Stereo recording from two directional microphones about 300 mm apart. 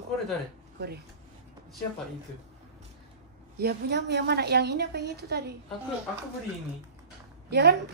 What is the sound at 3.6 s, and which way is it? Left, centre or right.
A woman's voice, right.